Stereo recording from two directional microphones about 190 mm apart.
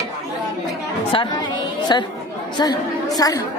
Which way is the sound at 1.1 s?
25° left (ahead or behind).